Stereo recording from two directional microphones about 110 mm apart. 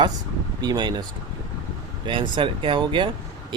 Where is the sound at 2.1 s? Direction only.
50° right (ahead or behind).